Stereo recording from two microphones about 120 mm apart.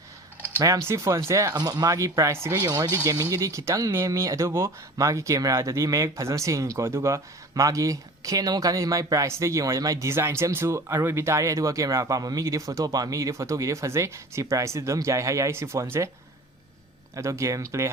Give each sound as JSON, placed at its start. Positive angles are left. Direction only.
{"t": 0.6, "sound": "speech", "side_deg": -25}
{"t": 17.2, "sound": "speech", "side_deg": -25}